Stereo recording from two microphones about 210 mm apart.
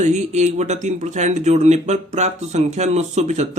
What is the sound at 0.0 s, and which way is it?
Speech, 35° right (ahead or behind).